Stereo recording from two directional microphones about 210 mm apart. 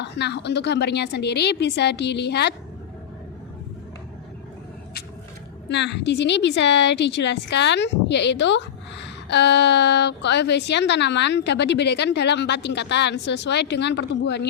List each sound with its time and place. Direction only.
0.0 s a woman's voice: 55° left (ahead or behind)
5.6 s a woman's voice: 55° left (ahead or behind)